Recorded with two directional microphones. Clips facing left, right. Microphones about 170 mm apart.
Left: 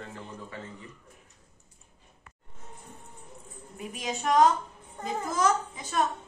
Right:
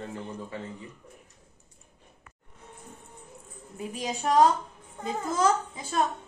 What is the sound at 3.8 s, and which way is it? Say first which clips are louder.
A woman's voice: right 2 dB; 35° right (ahead or behind).